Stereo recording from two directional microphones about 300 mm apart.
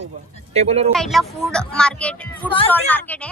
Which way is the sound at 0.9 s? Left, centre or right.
Centre.